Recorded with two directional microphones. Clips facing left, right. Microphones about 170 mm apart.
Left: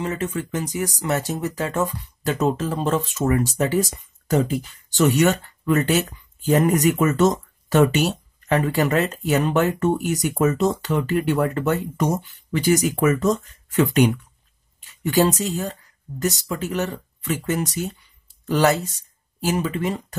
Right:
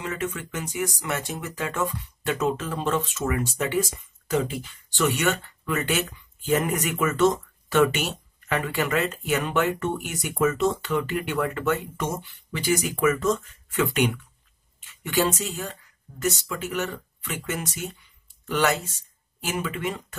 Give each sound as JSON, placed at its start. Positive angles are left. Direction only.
{"t": 0.0, "sound": "speech", "side_deg": 35}